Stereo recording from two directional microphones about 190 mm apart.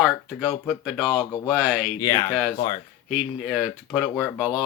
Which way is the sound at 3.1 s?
5° right (ahead or behind).